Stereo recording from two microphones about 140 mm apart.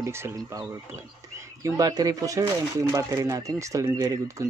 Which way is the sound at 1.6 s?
25° right (ahead or behind).